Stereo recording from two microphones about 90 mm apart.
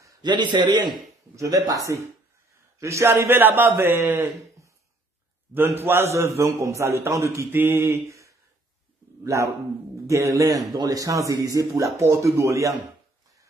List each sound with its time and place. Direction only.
0.2 s a man's voice: 55° right (ahead or behind)
1.3 s a man's voice: 40° right (ahead or behind)
2.8 s a man's voice: 35° right (ahead or behind)
5.5 s a man's voice: 25° right (ahead or behind)